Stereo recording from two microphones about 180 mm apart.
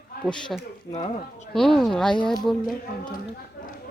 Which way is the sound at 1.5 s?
Centre (ahead or behind).